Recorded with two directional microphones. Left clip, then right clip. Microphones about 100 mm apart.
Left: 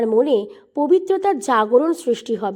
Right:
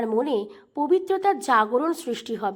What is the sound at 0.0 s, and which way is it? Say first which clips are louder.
A woman's voice: left 7 dB; 35° left (ahead or behind).